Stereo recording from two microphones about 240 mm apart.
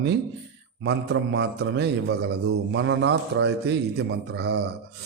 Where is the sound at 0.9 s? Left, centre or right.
Right.